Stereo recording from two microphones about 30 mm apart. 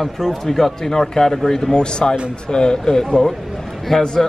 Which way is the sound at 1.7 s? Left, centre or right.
Left.